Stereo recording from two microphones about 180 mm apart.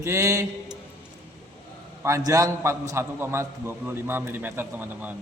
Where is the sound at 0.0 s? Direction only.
15° right (ahead or behind).